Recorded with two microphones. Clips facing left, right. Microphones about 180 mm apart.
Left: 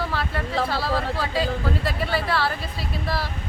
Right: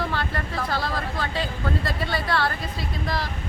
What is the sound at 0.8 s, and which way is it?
Speech, 5° left (ahead or behind).